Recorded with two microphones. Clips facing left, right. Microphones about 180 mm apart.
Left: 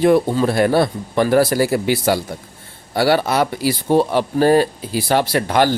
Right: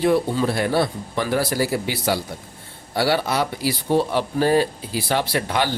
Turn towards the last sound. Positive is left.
turn(degrees=45)  # may be behind; listen again after turning